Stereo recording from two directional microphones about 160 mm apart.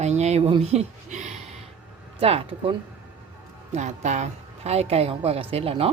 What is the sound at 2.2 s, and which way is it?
Speech, 35° right (ahead or behind).